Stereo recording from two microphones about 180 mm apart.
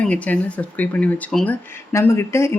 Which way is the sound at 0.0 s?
5° left (ahead or behind).